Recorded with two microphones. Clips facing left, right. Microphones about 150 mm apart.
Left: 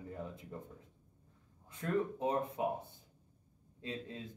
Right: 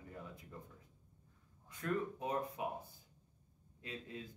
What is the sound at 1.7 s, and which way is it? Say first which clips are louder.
Speech: left 4 dB; 25° left (ahead or behind).